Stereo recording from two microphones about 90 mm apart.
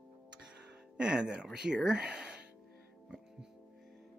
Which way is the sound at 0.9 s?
10° right (ahead or behind).